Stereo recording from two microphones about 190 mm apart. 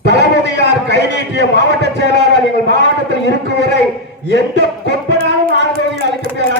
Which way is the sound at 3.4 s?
65° right (ahead or behind).